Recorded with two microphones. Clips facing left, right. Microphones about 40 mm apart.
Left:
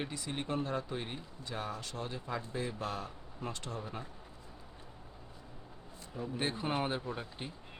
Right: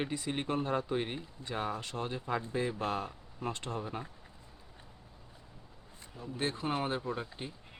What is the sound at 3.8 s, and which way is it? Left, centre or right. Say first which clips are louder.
Speech: right 3 dB; centre.